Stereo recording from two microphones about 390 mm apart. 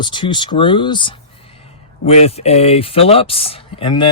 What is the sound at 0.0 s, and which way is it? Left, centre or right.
Speech, centre.